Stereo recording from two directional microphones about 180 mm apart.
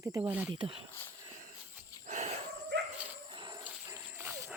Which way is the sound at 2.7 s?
75° right (ahead or behind).